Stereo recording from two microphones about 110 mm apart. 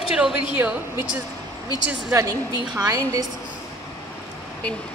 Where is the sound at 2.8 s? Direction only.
30° right (ahead or behind).